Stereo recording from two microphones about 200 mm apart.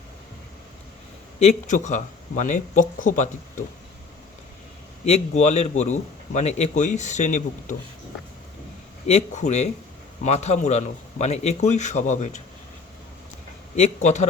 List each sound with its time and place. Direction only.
1.4 s a man's voice: 35° left (ahead or behind)
5.0 s a man's voice: 35° left (ahead or behind)
9.0 s a man's voice: 35° left (ahead or behind)
13.7 s a man's voice: 35° left (ahead or behind)